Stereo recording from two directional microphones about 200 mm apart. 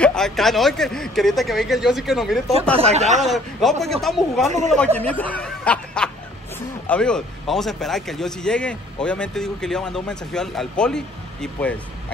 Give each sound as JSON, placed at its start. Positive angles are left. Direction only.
{"t": 0.0, "sound": "speech", "side_deg": 5}
{"t": 2.8, "sound": "speech", "side_deg": -35}
{"t": 3.2, "sound": "speech", "side_deg": 0}